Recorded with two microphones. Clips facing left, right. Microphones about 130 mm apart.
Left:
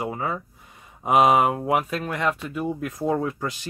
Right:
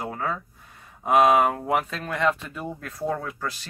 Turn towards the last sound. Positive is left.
turn(degrees=15)  # may be behind; listen again after turning